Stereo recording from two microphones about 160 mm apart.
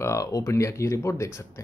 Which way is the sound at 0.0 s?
20° left (ahead or behind).